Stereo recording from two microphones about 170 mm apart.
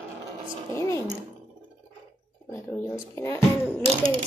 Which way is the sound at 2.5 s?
10° left (ahead or behind).